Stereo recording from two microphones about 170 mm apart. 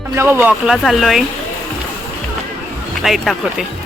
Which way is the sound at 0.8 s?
Centre (ahead or behind).